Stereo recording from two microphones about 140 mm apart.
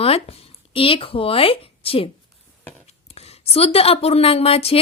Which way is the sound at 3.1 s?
45° left (ahead or behind).